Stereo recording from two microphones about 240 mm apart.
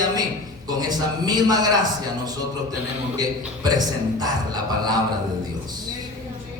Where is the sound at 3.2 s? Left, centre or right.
Centre.